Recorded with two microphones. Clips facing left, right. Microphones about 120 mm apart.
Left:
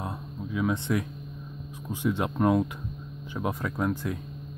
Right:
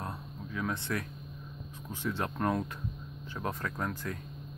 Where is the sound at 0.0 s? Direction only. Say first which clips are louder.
Left 5 dB; 15° left (ahead or behind).